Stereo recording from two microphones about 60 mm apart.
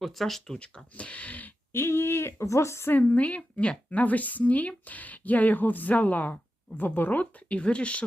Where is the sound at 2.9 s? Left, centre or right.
Left.